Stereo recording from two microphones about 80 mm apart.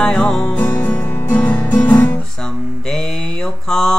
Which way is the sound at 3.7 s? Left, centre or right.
Centre.